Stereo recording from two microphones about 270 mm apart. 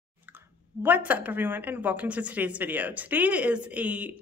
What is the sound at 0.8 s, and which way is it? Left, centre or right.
Speech, centre.